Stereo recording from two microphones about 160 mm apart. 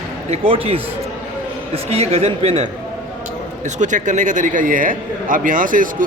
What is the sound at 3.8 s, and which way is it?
A man's voice, 50° right (ahead or behind).